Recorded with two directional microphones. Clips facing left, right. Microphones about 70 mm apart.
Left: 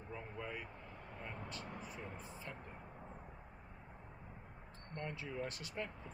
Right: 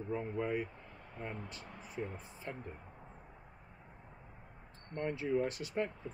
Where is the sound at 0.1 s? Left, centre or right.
Right.